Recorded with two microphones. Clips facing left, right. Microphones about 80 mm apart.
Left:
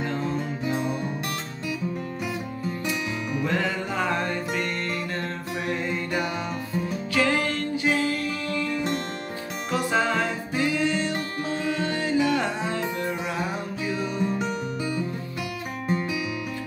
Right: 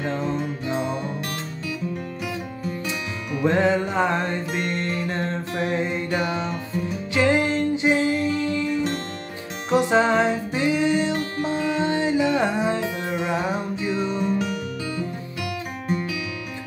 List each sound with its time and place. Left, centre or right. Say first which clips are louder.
3.4 s music: right 9 dB; right